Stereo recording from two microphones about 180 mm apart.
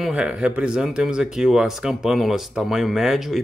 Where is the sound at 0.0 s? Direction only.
5° right (ahead or behind).